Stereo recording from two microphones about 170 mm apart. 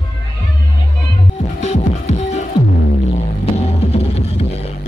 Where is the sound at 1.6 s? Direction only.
40° left (ahead or behind).